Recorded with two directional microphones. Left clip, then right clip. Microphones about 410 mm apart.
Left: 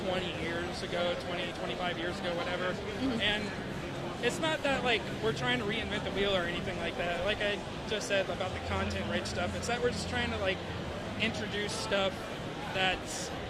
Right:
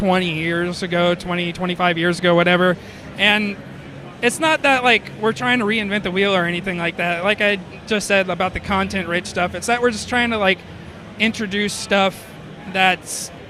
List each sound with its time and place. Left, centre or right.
0.1 s speech: right
3.2 s speech: right